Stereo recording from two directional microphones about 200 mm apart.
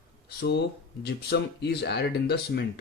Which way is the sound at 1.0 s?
55° left (ahead or behind).